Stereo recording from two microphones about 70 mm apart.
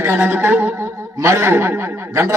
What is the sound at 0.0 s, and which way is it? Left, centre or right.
A man's voice, right.